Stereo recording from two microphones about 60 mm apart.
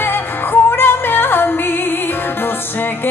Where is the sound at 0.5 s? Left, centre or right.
Left.